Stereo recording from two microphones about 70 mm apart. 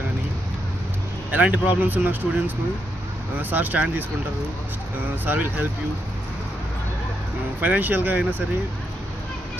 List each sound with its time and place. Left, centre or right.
1.3 s speech: right
5.2 s speech: right
7.6 s speech: right